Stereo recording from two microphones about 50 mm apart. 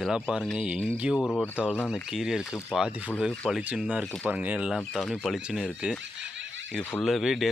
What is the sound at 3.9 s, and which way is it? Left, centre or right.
Speech, right.